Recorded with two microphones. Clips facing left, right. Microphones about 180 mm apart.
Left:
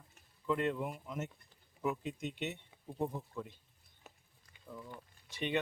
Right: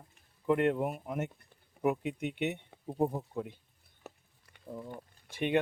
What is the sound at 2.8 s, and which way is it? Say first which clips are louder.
Speech: right 7 dB; 40° right (ahead or behind).